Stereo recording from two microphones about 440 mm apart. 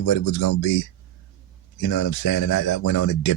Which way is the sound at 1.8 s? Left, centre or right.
Left.